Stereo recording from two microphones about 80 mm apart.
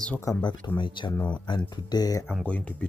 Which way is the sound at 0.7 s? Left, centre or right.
Left.